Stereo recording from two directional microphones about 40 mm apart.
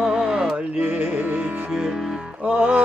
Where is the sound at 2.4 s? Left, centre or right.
Right.